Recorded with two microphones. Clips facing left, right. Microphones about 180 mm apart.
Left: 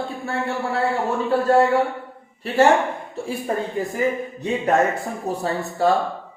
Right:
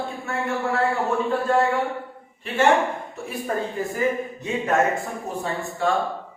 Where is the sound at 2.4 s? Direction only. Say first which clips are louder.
Left 3 dB; 35° left (ahead or behind).